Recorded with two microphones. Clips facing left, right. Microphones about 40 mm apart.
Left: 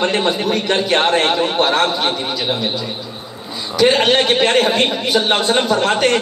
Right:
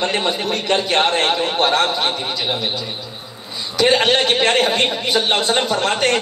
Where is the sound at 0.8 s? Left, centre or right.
Left.